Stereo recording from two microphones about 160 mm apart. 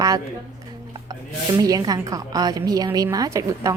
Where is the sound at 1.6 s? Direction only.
20° right (ahead or behind).